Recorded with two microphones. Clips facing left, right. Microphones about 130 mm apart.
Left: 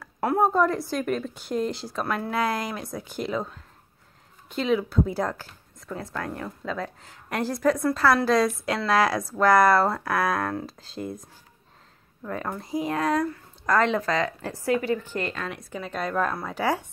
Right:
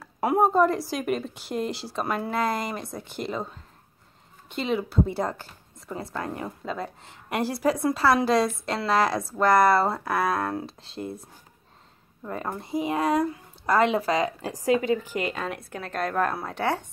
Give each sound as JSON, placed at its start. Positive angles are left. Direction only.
{"t": 0.0, "sound": "a sound", "side_deg": -15}
{"t": 0.4, "sound": "a woman's voice", "side_deg": -5}
{"t": 12.2, "sound": "speech", "side_deg": -10}